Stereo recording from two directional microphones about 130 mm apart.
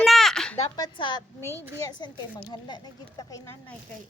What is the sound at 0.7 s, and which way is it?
Speech, 35° left (ahead or behind).